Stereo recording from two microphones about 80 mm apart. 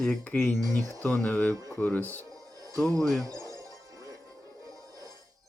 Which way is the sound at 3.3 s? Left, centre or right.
Right.